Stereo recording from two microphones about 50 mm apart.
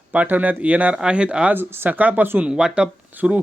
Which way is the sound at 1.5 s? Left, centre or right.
Right.